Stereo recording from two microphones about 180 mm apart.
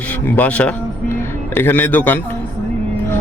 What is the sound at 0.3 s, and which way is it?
A man's voice, 10° left (ahead or behind).